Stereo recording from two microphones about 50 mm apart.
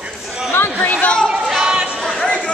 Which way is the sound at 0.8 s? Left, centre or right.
Left.